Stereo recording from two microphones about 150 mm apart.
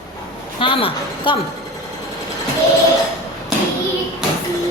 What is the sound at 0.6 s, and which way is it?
Speech, 35° left (ahead or behind).